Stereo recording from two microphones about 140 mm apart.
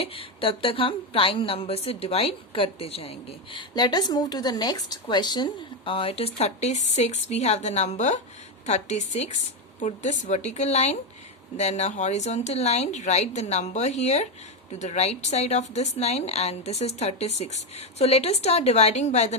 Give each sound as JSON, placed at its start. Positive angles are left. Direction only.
{"t": 0.0, "sound": "a woman's voice", "side_deg": 40}
{"t": 3.8, "sound": "a woman's voice", "side_deg": 30}